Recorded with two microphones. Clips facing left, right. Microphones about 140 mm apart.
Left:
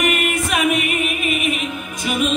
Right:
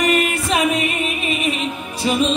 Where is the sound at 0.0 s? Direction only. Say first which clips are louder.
Right 2 dB; 35° right (ahead or behind).